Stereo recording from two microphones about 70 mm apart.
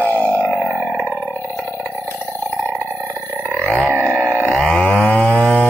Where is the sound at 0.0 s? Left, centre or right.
Left.